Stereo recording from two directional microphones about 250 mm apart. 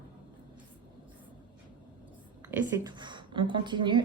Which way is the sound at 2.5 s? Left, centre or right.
Centre.